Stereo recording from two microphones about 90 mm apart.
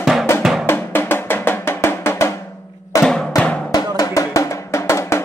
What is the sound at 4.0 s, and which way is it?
Drum, 40° left (ahead or behind).